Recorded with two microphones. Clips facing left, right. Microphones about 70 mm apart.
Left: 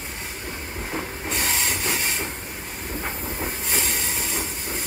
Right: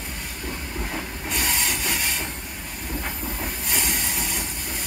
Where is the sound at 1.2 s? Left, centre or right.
Centre.